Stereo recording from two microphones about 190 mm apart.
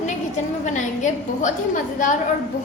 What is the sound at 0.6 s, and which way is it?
A woman's voice, 40° left (ahead or behind).